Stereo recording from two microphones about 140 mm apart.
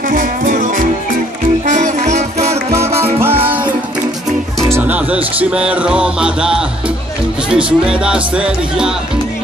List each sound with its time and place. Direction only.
0.1 s music: 75° right (ahead or behind)
1.7 s music: 55° right (ahead or behind)
3.2 s music: 15° right (ahead or behind)
4.7 s speech: 10° right (ahead or behind)